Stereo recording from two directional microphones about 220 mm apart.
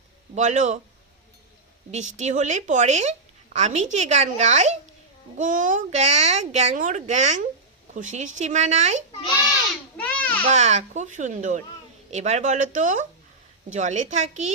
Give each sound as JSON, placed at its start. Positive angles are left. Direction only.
{"t": 0.3, "sound": "a woman's voice", "side_deg": -35}
{"t": 1.9, "sound": "a woman's voice", "side_deg": -30}
{"t": 10.0, "sound": "babbling", "side_deg": 5}
{"t": 10.5, "sound": "a woman's voice", "side_deg": -30}